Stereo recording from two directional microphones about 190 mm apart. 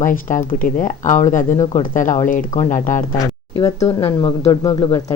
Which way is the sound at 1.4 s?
15° left (ahead or behind).